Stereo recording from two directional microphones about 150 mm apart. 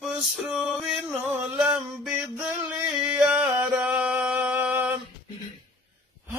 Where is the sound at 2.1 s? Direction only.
15° right (ahead or behind).